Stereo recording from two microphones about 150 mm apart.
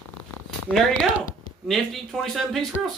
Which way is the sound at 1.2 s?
65° left (ahead or behind).